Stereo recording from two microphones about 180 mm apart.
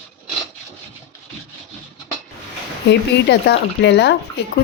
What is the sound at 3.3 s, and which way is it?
Speech, 70° left (ahead or behind).